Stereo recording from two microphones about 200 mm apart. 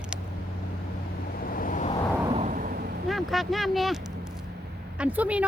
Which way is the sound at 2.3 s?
35° right (ahead or behind).